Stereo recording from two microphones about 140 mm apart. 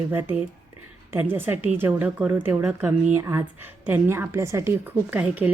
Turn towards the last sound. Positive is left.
turn(degrees=-10)  # may be behind; listen again after turning